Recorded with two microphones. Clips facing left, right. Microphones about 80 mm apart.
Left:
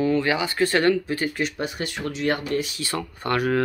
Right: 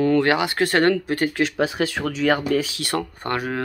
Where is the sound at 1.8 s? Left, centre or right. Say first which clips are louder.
Right 7 dB; right.